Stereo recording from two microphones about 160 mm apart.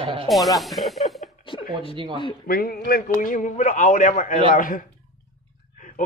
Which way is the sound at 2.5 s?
65° left (ahead or behind).